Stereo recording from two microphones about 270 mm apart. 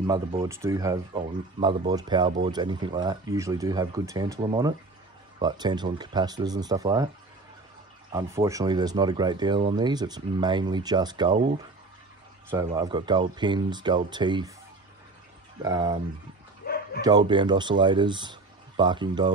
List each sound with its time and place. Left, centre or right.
0.0 s speech: centre
8.1 s speech: centre
15.6 s speech: centre
16.6 s bow-wow: left
17.0 s speech: centre